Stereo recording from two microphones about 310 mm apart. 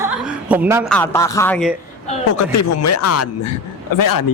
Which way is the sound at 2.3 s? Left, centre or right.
Left.